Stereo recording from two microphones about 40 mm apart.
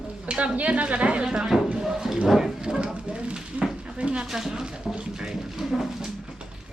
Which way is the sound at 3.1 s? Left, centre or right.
Right.